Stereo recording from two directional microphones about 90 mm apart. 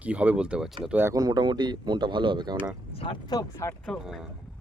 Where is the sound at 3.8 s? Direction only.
5° right (ahead or behind).